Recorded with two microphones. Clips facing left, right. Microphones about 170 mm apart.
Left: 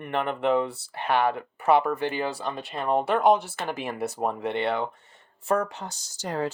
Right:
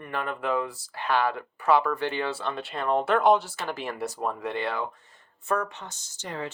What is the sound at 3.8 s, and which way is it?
Speech, 55° left (ahead or behind).